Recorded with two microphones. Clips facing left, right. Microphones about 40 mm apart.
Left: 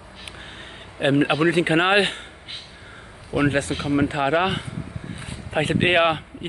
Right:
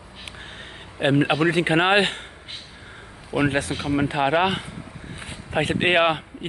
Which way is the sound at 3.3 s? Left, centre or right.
Centre.